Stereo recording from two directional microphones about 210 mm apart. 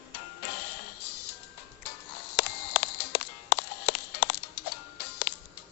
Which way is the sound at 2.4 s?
50° left (ahead or behind).